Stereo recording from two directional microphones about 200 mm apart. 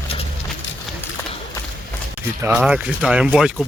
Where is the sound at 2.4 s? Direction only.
5° right (ahead or behind).